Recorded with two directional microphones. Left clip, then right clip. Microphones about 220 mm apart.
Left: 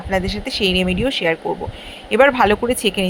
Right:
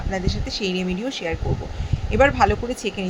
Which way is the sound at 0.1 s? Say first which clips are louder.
Left 7 dB; 15° left (ahead or behind).